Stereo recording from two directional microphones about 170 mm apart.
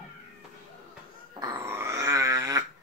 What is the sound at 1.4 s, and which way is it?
Dog, 25° right (ahead or behind).